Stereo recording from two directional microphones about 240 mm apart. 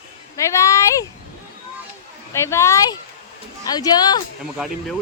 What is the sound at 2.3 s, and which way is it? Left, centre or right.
A woman's voice, centre.